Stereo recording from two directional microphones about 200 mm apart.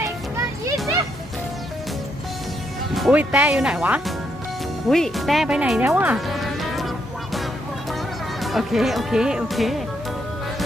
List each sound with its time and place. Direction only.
0.0 s children playing: 15° right (ahead or behind)
2.9 s speech: 5° right (ahead or behind)
8.4 s speech: centre (ahead or behind)